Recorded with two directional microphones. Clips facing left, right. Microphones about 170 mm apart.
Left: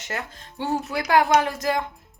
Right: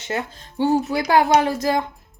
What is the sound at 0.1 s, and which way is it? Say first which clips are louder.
Speech: right 6 dB; 30° right (ahead or behind).